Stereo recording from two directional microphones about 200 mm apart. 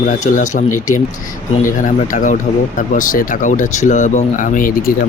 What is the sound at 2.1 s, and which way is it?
Speech, 40° left (ahead or behind).